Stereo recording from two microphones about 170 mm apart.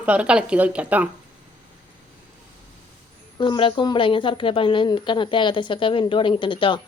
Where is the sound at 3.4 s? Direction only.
30° left (ahead or behind).